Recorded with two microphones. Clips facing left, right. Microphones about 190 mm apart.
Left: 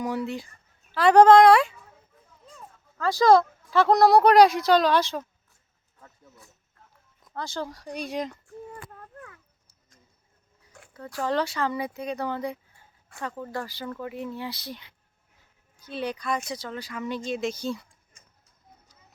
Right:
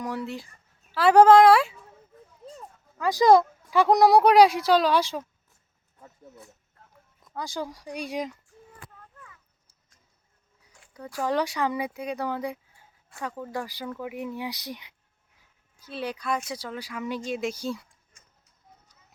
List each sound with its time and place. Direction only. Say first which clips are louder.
0.0 s speech: left 3 dB; centre (ahead or behind)
3.0 s speech: even; 15° right (ahead or behind)
6.0 s speech: right 5 dB; 20° right (ahead or behind)
8.9 s a sound: left 7 dB; 60° left (ahead or behind)
10.9 s speech: even; 10° right (ahead or behind)
15.8 s speech: left 2 dB; 5° right (ahead or behind)